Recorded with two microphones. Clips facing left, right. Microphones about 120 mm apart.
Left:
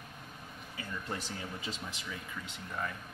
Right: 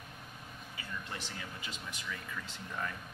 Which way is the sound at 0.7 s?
40° left (ahead or behind).